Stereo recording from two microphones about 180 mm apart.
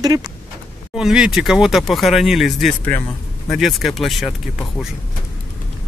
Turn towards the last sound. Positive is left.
turn(degrees=0)  # may be behind; listen again after turning